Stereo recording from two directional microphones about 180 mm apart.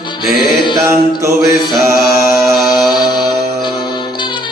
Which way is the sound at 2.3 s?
Centre (ahead or behind).